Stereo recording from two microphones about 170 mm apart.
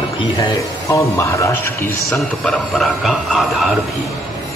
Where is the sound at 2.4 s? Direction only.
Centre (ahead or behind).